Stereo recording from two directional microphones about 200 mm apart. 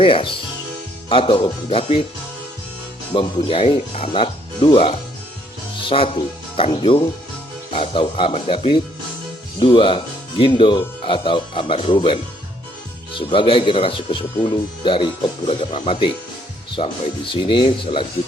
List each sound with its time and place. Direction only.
0.0 s speech: 25° left (ahead or behind)
3.2 s speech: 25° left (ahead or behind)